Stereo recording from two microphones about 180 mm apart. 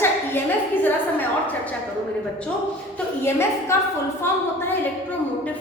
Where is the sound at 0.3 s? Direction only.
10° left (ahead or behind).